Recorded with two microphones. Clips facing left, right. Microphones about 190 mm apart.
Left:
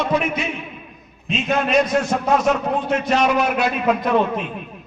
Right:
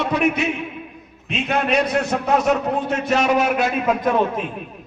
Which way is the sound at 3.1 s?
45° right (ahead or behind).